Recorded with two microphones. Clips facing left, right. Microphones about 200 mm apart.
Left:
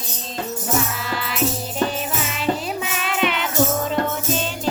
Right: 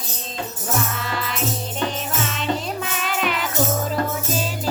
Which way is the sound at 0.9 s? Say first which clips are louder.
Left 2 dB; centre (ahead or behind).